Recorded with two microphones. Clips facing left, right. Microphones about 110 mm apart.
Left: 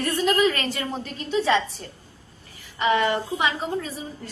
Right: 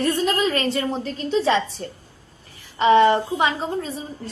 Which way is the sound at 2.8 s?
30° right (ahead or behind).